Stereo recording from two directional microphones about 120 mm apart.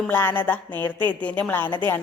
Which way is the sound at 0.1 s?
15° left (ahead or behind).